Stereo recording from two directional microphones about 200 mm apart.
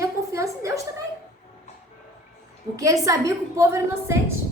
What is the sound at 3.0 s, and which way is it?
A woman's voice, 15° right (ahead or behind).